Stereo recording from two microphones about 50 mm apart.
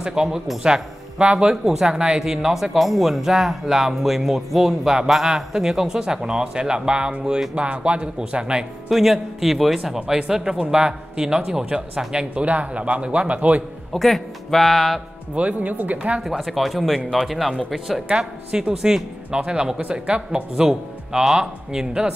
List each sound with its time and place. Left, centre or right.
0.0 s a woman's voice: centre
8.8 s speech: centre
9.9 s speech: centre
13.9 s speech: centre
15.3 s speech: right
16.3 s speech: centre
18.0 s speech: centre